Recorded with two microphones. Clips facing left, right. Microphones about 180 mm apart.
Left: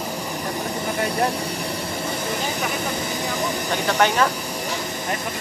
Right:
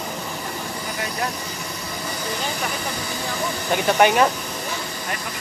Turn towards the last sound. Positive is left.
turn(degrees=-15)  # may be behind; listen again after turning